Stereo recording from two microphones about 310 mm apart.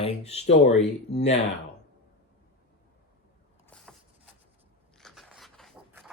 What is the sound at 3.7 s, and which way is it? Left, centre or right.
Vehicle, centre.